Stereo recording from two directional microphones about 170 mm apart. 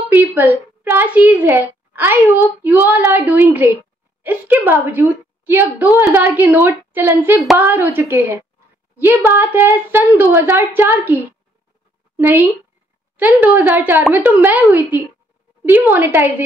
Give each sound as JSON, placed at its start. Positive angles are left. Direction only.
{"t": 0.1, "sound": "a woman's voice", "side_deg": -10}